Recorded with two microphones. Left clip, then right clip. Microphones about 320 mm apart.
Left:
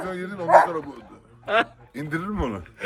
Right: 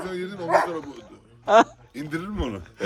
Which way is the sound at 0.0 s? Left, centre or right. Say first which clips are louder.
Even; centre.